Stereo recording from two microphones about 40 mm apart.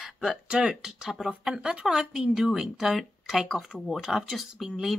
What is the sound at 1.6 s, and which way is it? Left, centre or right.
Speech, right.